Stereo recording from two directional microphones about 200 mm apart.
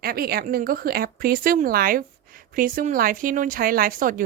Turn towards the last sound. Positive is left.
turn(degrees=-45)  # may be behind; listen again after turning